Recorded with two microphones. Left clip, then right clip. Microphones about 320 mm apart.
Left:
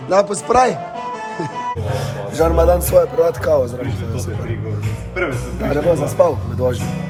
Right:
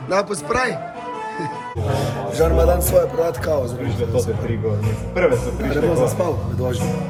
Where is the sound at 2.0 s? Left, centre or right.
Centre.